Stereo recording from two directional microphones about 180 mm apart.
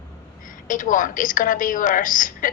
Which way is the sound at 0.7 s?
45° left (ahead or behind).